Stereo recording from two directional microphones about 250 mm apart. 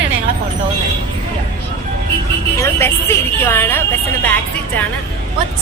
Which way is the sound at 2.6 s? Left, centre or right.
Centre.